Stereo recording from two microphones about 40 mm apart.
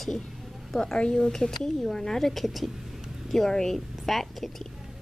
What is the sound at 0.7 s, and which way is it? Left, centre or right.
Speech, centre.